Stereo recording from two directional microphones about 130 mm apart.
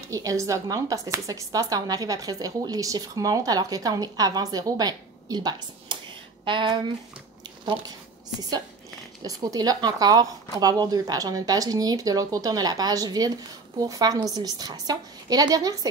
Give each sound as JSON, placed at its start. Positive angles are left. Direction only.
{"t": 0.1, "sound": "speech", "side_deg": -25}
{"t": 9.2, "sound": "speech", "side_deg": -25}